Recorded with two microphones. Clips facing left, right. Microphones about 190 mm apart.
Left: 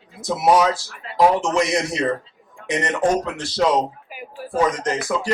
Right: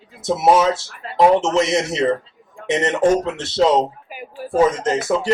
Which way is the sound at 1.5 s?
25° right (ahead or behind).